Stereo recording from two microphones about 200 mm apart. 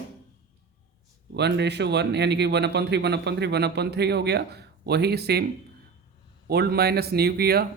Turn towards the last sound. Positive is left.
turn(degrees=-50)  # may be behind; listen again after turning